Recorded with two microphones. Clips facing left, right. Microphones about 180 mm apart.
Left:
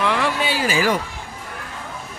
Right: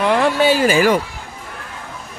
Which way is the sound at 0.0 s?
40° right (ahead or behind).